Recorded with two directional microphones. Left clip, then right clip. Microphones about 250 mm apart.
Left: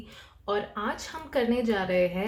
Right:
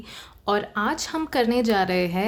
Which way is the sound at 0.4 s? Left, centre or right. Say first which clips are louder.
Right 6 dB; right.